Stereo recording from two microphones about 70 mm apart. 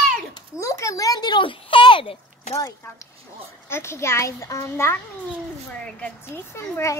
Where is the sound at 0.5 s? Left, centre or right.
Left.